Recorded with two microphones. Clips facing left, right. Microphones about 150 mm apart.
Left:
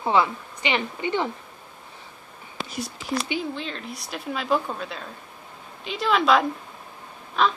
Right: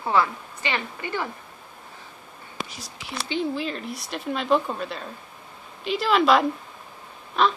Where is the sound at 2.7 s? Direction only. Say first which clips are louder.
Left 10 dB; 55° left (ahead or behind).